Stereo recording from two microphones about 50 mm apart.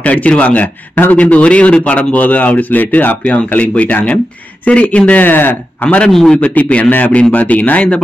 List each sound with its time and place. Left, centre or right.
0.0 s speech: left
2.1 s speech: left
5.2 s speech: left
6.1 s a man's voice: centre
6.4 s speech: left